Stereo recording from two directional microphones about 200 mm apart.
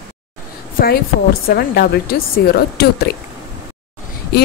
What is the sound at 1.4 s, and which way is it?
Speech, 50° left (ahead or behind).